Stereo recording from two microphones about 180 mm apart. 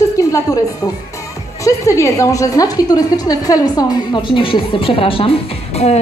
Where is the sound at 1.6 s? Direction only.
15° left (ahead or behind).